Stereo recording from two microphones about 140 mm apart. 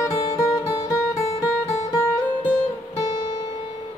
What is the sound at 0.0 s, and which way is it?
Music, 25° left (ahead or behind).